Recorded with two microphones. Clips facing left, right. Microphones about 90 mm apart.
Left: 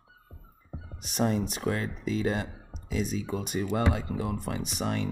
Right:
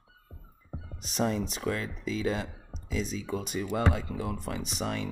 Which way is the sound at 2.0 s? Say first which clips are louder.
Left 1 dB; 45° left (ahead or behind).